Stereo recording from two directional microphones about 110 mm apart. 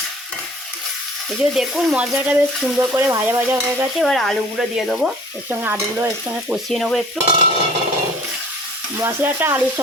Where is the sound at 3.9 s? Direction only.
5° left (ahead or behind).